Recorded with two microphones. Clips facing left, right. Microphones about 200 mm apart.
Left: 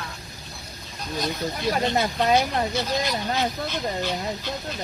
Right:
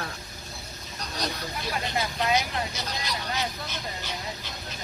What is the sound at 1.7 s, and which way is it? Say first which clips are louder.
Speech: left 7 dB; 50° left (ahead or behind).